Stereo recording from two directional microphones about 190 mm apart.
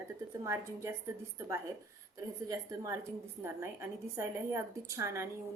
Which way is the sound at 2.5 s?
15° right (ahead or behind).